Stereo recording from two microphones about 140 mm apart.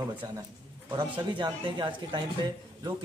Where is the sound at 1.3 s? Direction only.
35° right (ahead or behind).